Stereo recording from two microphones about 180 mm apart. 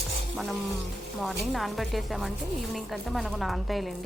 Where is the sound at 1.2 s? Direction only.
Centre (ahead or behind).